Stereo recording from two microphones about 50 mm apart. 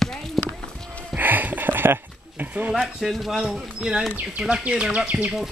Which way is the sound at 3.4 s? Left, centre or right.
Centre.